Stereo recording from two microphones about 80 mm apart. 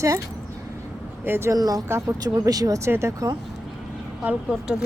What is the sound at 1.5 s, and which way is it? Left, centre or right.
Speech, right.